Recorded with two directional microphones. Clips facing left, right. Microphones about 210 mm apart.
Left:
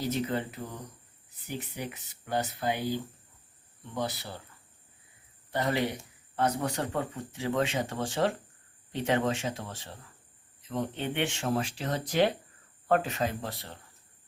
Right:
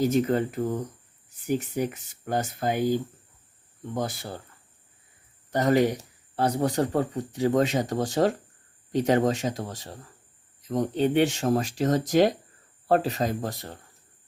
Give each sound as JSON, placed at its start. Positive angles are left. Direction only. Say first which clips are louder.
{"t": 0.0, "sound": "speech", "louder": "right 8 dB", "side_deg": -45}
{"t": 5.5, "sound": "speech", "louder": "right 8 dB", "side_deg": -45}